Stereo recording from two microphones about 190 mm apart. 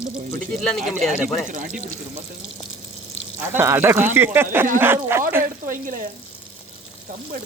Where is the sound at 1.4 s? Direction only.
45° right (ahead or behind).